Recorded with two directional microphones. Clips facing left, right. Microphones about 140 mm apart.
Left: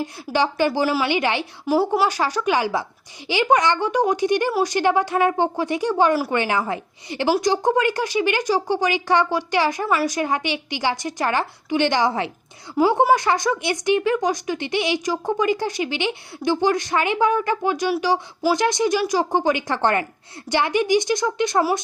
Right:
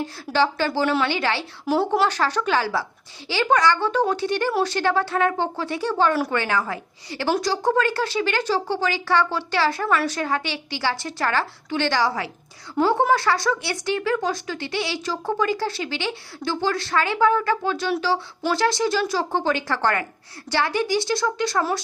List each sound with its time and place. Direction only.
0.3 s speech: 15° left (ahead or behind)
1.6 s a woman's voice: 5° left (ahead or behind)